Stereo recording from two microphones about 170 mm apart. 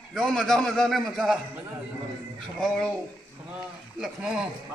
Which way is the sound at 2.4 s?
Centre (ahead or behind).